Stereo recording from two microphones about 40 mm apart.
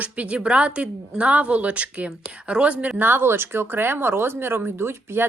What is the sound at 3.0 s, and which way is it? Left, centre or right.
Speech, right.